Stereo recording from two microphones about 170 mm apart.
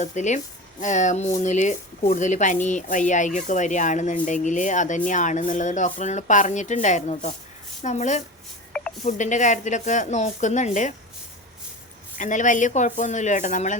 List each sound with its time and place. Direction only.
0.0 s speech: 45° left (ahead or behind)
12.1 s speech: 50° left (ahead or behind)